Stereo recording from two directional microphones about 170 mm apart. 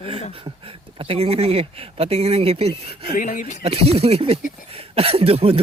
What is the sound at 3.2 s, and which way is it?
Speech, 50° left (ahead or behind).